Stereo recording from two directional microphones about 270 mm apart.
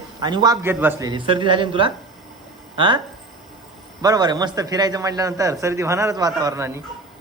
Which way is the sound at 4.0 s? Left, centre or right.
Centre.